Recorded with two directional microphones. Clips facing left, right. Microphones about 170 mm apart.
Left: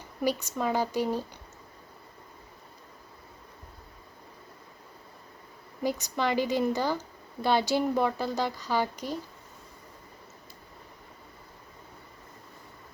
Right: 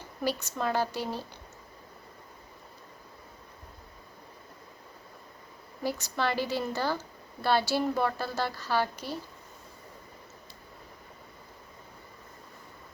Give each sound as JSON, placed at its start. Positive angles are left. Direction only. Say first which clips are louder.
{"t": 0.2, "sound": "speech", "louder": "left 2 dB", "side_deg": 15}
{"t": 5.8, "sound": "speech", "louder": "left 2 dB", "side_deg": 15}